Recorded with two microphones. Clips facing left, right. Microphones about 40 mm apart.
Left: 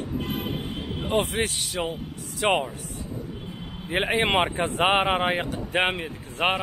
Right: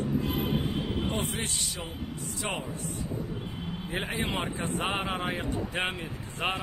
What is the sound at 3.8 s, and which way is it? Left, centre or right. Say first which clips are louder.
Speech: left 9 dB; left.